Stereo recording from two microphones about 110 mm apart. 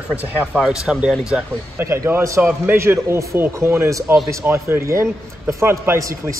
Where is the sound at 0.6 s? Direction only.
5° right (ahead or behind).